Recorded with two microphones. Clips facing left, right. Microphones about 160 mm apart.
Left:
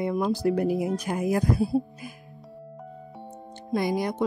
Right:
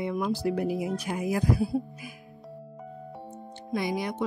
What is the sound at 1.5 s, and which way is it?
Speech, 25° left (ahead or behind).